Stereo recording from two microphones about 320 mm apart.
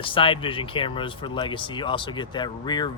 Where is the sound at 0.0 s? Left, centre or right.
Centre.